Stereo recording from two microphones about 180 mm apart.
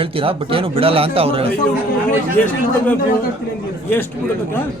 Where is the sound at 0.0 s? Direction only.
30° right (ahead or behind).